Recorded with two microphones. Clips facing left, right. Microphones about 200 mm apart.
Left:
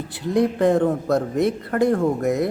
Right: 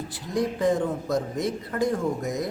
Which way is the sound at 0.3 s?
60° left (ahead or behind).